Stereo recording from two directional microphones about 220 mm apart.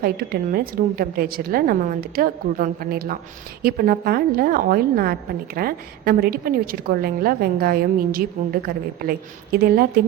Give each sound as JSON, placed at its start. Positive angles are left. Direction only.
{"t": 0.0, "sound": "a woman's voice", "side_deg": -40}